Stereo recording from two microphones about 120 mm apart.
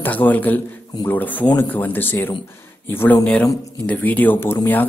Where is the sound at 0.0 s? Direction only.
15° left (ahead or behind).